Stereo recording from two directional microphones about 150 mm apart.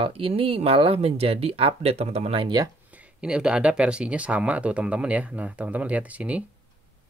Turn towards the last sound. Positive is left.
turn(degrees=-10)  # may be behind; listen again after turning